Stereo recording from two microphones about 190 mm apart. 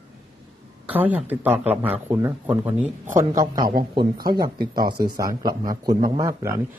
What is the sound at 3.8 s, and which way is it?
Speech, 55° right (ahead or behind).